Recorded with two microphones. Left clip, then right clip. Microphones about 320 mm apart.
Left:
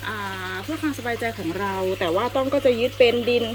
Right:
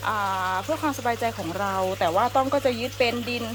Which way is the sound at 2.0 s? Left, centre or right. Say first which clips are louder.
Right 2 dB; right.